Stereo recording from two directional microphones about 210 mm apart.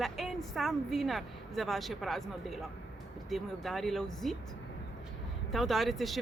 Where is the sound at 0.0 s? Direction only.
Centre (ahead or behind).